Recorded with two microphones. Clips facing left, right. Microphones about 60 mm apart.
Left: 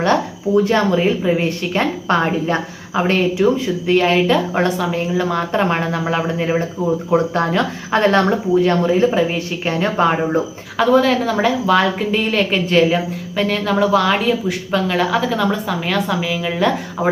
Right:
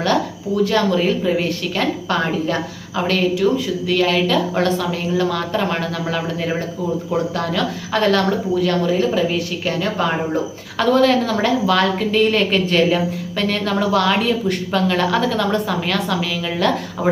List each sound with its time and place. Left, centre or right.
0.0 s speech: left
10.8 s a woman's voice: centre